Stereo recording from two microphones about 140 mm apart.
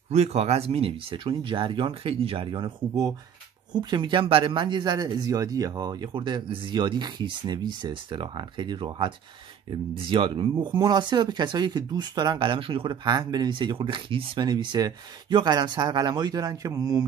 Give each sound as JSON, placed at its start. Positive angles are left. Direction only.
{"t": 0.1, "sound": "speech", "side_deg": -50}